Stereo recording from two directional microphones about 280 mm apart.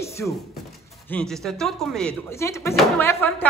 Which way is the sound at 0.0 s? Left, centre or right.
Centre.